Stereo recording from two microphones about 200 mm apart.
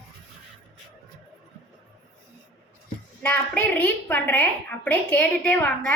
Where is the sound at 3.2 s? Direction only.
5° left (ahead or behind).